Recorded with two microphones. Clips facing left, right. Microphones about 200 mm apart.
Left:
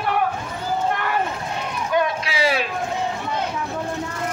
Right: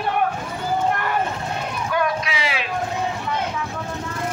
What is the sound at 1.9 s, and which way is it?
Run, 25° left (ahead or behind).